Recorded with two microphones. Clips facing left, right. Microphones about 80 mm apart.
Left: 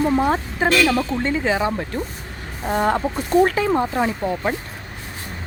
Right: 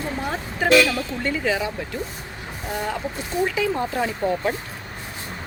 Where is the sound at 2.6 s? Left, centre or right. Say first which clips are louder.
Left 8 dB; left.